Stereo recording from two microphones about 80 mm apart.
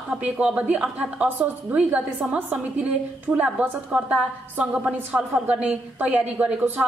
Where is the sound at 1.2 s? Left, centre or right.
Right.